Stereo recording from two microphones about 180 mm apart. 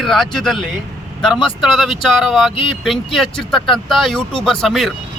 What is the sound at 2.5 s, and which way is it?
Speech, 30° left (ahead or behind).